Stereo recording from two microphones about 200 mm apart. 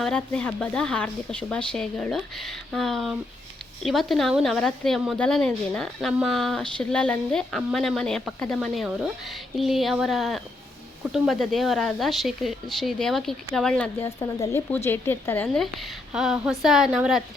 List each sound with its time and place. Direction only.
0.0 s a woman's voice: 5° left (ahead or behind)
14.2 s a woman's voice: 15° left (ahead or behind); by 17.2 s centre (ahead or behind)